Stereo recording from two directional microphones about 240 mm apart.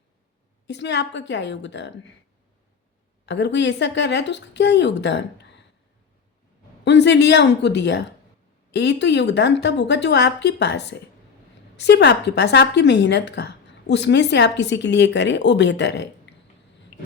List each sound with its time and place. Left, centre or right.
0.7 s a woman's voice: left
3.2 s a woman's voice: left
6.8 s a woman's voice: left